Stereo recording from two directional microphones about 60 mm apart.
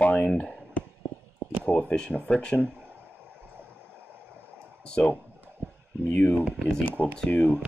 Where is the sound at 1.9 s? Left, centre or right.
Centre.